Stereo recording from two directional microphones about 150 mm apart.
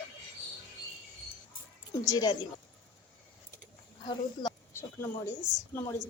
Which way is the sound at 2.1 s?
30° left (ahead or behind).